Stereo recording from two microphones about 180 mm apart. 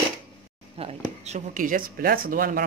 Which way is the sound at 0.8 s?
40° right (ahead or behind).